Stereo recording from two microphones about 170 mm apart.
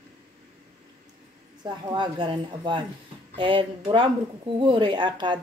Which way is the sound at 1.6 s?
25° right (ahead or behind).